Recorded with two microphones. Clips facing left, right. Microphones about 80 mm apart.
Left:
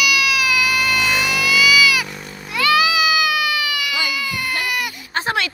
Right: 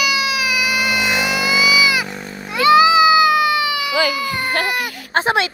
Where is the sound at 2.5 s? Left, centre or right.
Right.